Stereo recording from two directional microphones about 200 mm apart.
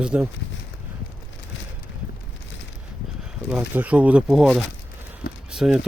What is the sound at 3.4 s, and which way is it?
Speech, 5° right (ahead or behind).